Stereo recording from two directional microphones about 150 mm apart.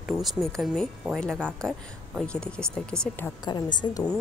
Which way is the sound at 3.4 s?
30° left (ahead or behind).